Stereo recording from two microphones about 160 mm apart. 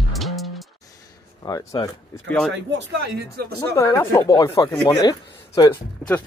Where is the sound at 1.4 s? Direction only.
20° left (ahead or behind).